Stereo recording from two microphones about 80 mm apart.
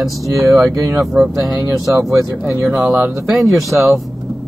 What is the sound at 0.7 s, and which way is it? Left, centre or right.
Speech, right.